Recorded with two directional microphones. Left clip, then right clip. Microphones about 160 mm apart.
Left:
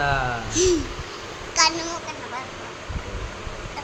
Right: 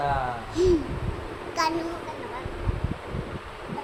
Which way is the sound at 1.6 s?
30° right (ahead or behind).